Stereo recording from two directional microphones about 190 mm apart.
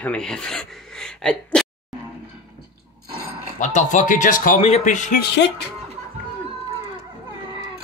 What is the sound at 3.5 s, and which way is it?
Speech, 40° left (ahead or behind).